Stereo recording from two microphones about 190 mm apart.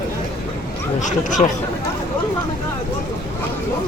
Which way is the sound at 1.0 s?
40° left (ahead or behind).